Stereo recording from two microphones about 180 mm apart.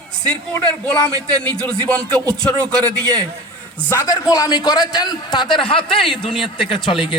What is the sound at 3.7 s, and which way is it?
A man's voice, 15° left (ahead or behind).